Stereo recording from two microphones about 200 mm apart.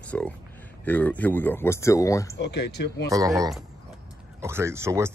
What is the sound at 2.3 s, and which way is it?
Speech, 60° left (ahead or behind).